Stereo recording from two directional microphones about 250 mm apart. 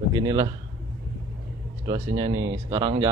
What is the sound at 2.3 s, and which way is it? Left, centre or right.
Speech, right.